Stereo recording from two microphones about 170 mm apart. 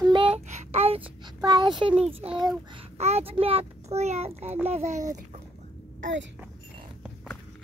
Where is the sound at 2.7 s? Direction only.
35° right (ahead or behind).